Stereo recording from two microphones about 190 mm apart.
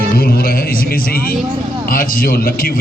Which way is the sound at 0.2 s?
50° left (ahead or behind).